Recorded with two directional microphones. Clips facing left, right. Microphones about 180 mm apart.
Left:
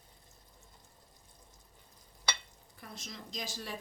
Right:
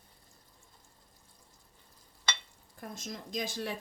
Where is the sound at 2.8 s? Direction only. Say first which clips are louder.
Right 5 dB; 45° right (ahead or behind).